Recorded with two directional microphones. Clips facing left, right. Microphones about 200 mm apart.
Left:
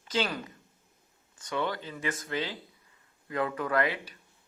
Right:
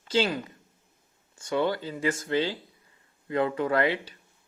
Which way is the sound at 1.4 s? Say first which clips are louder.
Right 6 dB; 30° right (ahead or behind).